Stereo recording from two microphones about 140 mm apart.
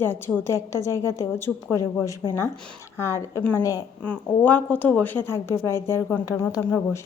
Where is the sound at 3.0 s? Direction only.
20° left (ahead or behind).